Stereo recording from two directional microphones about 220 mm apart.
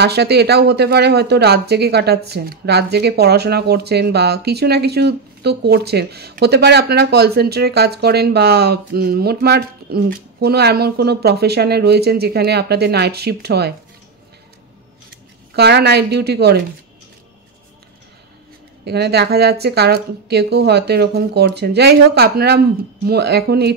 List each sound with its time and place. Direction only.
0.0 s speech: 50° right (ahead or behind)
15.5 s speech: 50° right (ahead or behind)
18.9 s speech: 50° right (ahead or behind)